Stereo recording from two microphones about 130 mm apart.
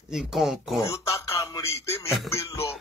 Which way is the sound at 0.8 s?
25° left (ahead or behind).